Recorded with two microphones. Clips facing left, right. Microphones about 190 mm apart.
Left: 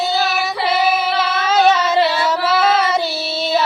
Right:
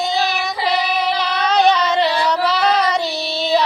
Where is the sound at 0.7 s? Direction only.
5° left (ahead or behind).